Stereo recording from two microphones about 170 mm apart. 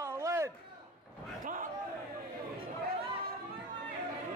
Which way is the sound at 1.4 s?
50° right (ahead or behind).